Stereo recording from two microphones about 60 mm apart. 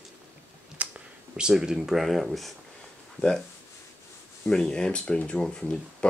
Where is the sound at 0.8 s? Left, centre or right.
Right.